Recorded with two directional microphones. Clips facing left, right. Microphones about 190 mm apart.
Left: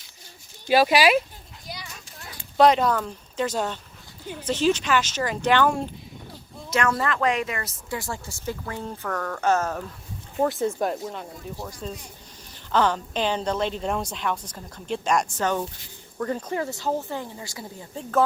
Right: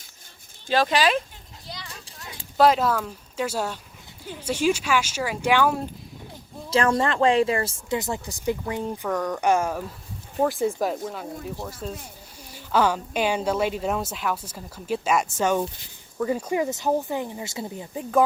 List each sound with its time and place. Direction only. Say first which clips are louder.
0.7 s speech: left 3 dB; 10° left (ahead or behind)
1.6 s children playing: left 1 dB; 10° left (ahead or behind)
2.6 s speech: left 1 dB; 5° right (ahead or behind)
6.7 s speech: right 3 dB; 30° right (ahead or behind); by 9.8 s 10° right (ahead or behind)
10.3 s speech: right 1 dB; centre (ahead or behind); by 18.2 s 15° right (ahead or behind)